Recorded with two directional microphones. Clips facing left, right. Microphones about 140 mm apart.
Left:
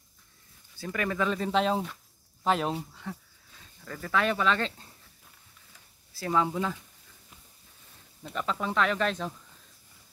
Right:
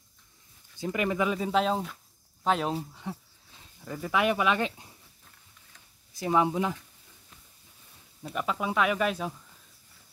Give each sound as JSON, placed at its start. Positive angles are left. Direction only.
{"t": 0.7, "sound": "speech", "side_deg": -20}
{"t": 2.9, "sound": "speech", "side_deg": -15}
{"t": 6.1, "sound": "speech", "side_deg": -20}
{"t": 8.2, "sound": "speech", "side_deg": -10}